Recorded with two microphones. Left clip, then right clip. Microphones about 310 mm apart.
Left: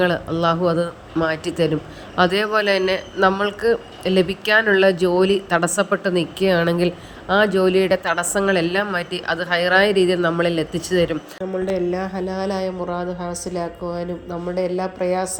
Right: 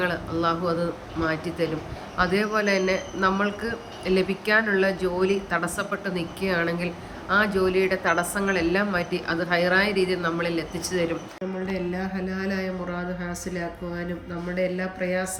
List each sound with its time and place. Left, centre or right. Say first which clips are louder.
0.0 s a man's voice: left 6 dB; centre
11.7 s speech: left 8 dB; centre